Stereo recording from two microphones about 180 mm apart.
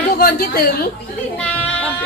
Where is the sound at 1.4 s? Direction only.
5° left (ahead or behind).